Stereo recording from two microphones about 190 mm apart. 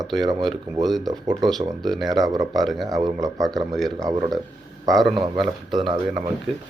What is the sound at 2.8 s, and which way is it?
Speech, 20° right (ahead or behind).